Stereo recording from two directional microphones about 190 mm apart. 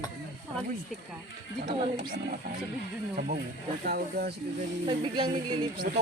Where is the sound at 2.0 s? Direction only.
45° right (ahead or behind).